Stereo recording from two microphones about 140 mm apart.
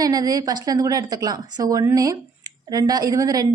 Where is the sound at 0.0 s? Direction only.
25° right (ahead or behind).